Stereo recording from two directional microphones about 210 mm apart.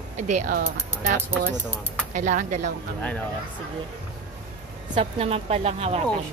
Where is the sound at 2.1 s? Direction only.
35° right (ahead or behind).